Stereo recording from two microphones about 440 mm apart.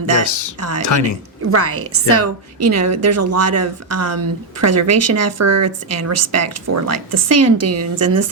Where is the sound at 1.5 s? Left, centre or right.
Right.